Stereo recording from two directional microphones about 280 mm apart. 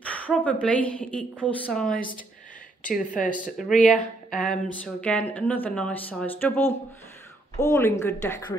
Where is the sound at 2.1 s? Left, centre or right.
Left.